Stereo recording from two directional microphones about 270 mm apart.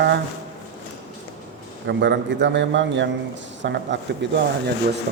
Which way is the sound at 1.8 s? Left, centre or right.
Right.